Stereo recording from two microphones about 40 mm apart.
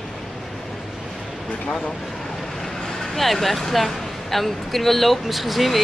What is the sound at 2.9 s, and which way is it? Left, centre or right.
Speech, centre.